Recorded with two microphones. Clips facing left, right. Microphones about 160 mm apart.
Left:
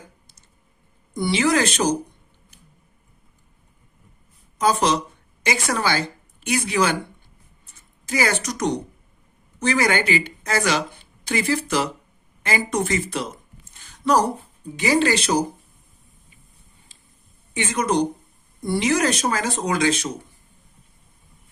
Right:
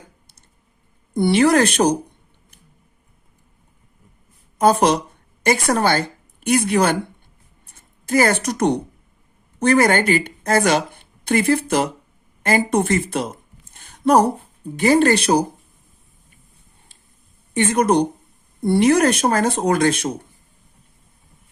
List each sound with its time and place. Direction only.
1.1 s speech: 60° right (ahead or behind)
4.5 s a woman's voice: 55° right (ahead or behind)
7.6 s a sound: 60° right (ahead or behind)
9.6 s a woman's voice: 55° right (ahead or behind)
12.4 s a sound: 50° right (ahead or behind)
14.6 s speech: 55° right (ahead or behind)
17.5 s speech: 55° right (ahead or behind)